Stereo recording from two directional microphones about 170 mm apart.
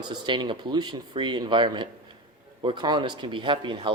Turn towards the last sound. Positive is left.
turn(degrees=-30)  # may be behind; listen again after turning